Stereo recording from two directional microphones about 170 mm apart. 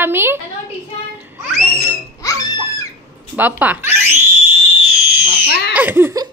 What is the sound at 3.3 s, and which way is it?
Speech, 10° right (ahead or behind).